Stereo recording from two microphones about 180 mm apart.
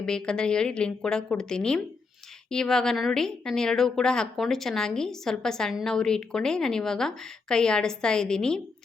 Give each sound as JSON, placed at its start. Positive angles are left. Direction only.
{"t": 0.0, "sound": "a woman's voice", "side_deg": 5}